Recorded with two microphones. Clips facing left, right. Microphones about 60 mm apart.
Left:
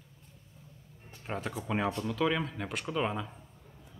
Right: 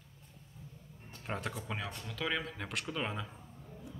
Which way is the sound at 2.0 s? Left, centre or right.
Centre.